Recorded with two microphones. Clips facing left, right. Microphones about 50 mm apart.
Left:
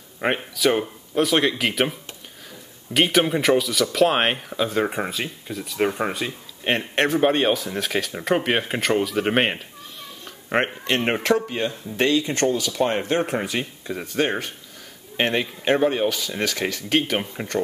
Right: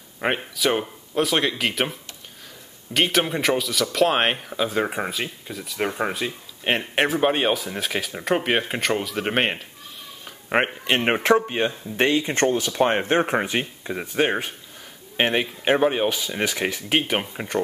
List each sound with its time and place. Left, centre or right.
0.2 s speech: centre
10.2 s speech: centre
11.4 s speech: right; by 17.6 s centre